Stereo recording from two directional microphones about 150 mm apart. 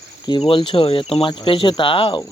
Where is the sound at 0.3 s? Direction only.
35° left (ahead or behind).